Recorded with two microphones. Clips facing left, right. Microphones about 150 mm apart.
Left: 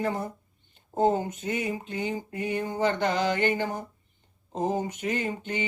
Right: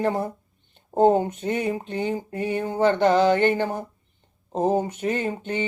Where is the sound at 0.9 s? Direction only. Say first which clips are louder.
Right 6 dB; 60° right (ahead or behind).